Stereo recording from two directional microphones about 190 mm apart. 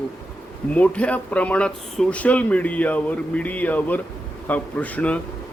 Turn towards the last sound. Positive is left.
turn(degrees=5)  # may be behind; listen again after turning